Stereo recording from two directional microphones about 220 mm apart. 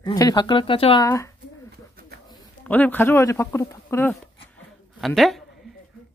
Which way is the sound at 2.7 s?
10° left (ahead or behind).